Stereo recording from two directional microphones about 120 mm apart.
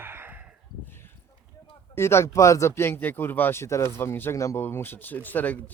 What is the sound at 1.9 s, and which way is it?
Speech, 20° left (ahead or behind).